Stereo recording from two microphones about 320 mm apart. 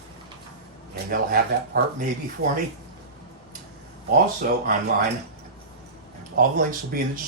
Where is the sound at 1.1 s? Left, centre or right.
Right.